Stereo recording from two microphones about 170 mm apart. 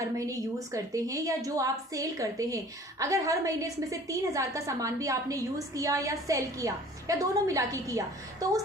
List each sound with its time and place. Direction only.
0.0 s a woman's voice: 20° right (ahead or behind)